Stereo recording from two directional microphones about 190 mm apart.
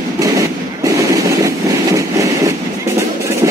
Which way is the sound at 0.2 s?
15° right (ahead or behind).